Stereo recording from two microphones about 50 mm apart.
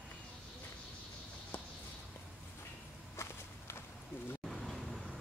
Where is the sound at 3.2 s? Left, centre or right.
Left.